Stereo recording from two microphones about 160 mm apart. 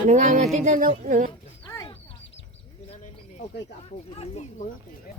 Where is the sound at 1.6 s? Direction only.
25° left (ahead or behind).